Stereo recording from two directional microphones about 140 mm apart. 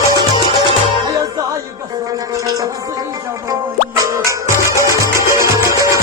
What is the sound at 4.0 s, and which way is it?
Music, 20° right (ahead or behind).